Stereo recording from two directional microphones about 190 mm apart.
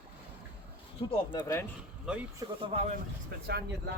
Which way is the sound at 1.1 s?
25° left (ahead or behind).